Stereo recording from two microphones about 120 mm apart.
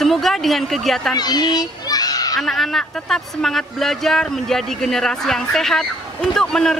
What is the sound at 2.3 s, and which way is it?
Speech, centre (ahead or behind).